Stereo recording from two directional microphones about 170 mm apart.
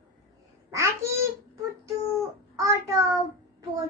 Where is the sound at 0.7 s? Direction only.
15° right (ahead or behind).